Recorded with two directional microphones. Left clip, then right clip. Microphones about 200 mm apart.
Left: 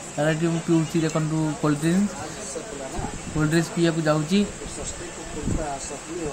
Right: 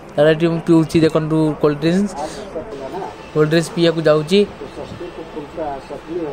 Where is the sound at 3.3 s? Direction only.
45° right (ahead or behind).